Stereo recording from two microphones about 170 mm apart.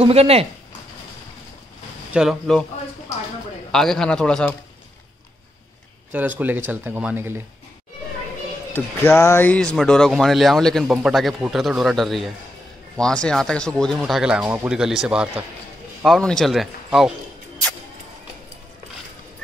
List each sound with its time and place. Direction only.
0.0 s speech: 35° right (ahead or behind)
2.1 s speech: centre (ahead or behind)
3.7 s speech: 5° left (ahead or behind)
6.1 s speech: 10° right (ahead or behind)
8.7 s speech: 15° left (ahead or behind)